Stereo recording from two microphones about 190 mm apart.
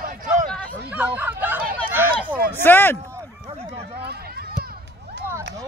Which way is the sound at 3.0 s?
15° right (ahead or behind).